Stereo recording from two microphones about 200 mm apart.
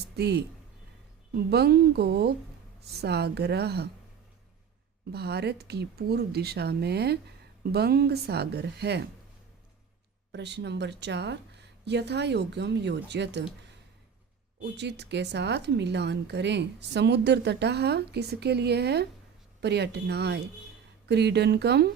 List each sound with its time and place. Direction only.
0.2 s speech: 55° right (ahead or behind)
1.5 s speech: 55° right (ahead or behind)
5.1 s speech: 55° right (ahead or behind)
10.3 s speech: 60° right (ahead or behind)
14.6 s speech: 60° right (ahead or behind)